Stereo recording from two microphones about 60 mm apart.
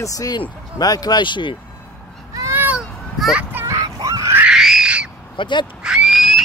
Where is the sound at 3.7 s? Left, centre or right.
Right.